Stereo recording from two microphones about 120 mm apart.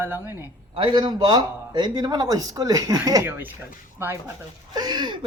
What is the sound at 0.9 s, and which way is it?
Speech, 35° right (ahead or behind).